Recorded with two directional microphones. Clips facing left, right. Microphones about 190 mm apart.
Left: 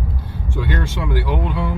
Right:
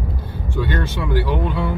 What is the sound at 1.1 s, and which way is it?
Speech, 15° left (ahead or behind).